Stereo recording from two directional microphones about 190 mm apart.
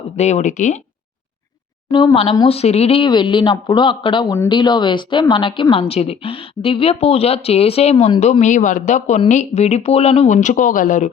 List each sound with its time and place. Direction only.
0.2 s speech: 35° left (ahead or behind)
1.9 s speech: 25° left (ahead or behind); by 11.1 s 45° left (ahead or behind)